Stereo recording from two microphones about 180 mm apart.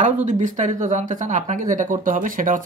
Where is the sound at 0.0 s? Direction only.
40° right (ahead or behind).